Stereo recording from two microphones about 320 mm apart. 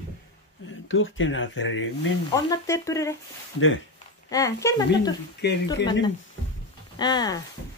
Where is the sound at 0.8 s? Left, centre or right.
Left.